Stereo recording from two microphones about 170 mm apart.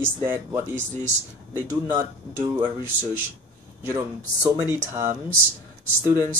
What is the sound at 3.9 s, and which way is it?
Speech, 20° right (ahead or behind).